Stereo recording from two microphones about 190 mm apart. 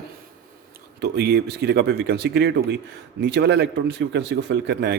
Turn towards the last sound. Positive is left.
turn(degrees=-65)  # may be behind; listen again after turning